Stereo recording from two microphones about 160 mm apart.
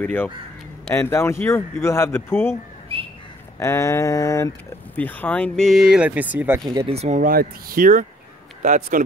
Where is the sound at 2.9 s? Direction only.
35° right (ahead or behind).